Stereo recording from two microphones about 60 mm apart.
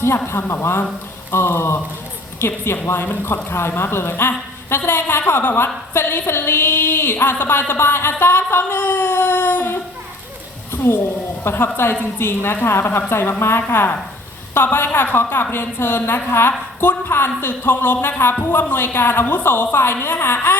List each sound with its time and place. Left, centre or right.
0.3 s a woman's voice: left
2.8 s a woman's voice: left
8.8 s baby cry: left
10.7 s a sound: left
11.4 s a woman's voice: left